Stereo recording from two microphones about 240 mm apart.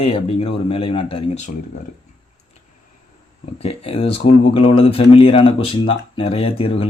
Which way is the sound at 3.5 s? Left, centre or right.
Left.